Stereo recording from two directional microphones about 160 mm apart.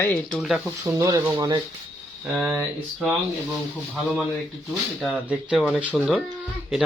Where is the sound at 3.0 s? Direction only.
Centre (ahead or behind).